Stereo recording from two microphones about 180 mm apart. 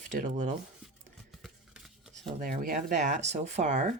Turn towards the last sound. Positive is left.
turn(degrees=-40)  # may be behind; listen again after turning